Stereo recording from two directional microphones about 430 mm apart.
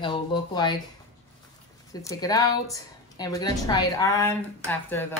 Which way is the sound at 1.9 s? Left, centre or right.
Centre.